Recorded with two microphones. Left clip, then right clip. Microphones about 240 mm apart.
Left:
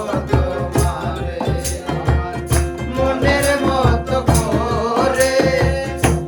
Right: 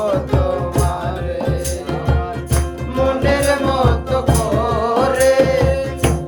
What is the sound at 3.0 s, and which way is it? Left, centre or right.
Music, right.